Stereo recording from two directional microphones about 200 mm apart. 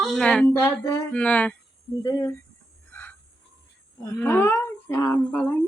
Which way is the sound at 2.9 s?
10° left (ahead or behind).